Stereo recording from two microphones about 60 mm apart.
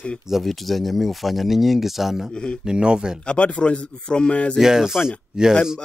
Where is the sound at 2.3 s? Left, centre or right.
Centre.